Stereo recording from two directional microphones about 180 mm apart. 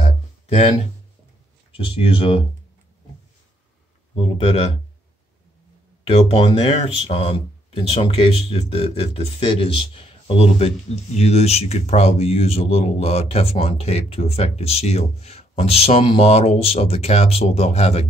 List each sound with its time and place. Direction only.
0.0 s a sound: 35° left (ahead or behind)
1.9 s speech: 30° left (ahead or behind)
4.1 s speech: 35° left (ahead or behind)
6.0 s speech: 30° left (ahead or behind)